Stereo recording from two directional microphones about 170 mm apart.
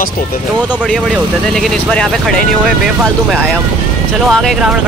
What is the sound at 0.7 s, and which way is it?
Speech, 5° right (ahead or behind).